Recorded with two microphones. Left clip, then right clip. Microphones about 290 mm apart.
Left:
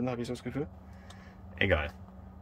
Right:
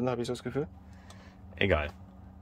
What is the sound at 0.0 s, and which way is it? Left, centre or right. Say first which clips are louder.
Speech: right 3 dB; centre.